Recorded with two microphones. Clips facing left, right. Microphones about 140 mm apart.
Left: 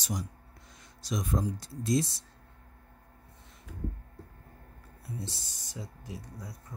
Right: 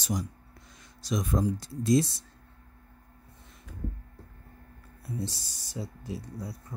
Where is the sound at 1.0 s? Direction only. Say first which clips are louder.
Right 3 dB; 90° right.